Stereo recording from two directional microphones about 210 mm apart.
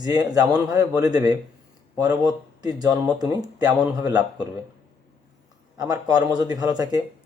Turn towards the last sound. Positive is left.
turn(degrees=-15)  # may be behind; listen again after turning